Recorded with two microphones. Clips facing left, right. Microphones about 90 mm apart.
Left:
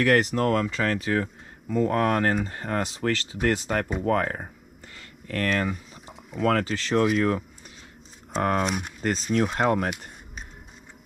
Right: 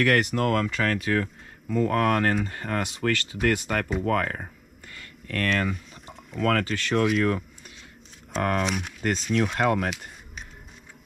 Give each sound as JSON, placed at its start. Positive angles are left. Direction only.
{"t": 0.0, "sound": "speech", "side_deg": 35}
{"t": 4.9, "sound": "a sound", "side_deg": 35}
{"t": 6.3, "sound": "speech", "side_deg": 35}